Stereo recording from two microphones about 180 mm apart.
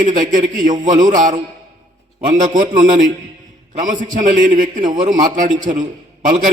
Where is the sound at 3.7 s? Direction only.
45° right (ahead or behind).